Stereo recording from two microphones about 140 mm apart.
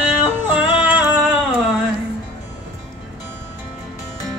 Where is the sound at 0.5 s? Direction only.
10° right (ahead or behind).